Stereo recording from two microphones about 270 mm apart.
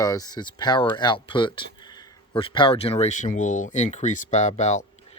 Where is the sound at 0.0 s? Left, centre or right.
Centre.